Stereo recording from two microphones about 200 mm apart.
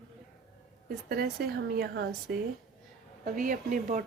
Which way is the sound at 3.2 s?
40° right (ahead or behind).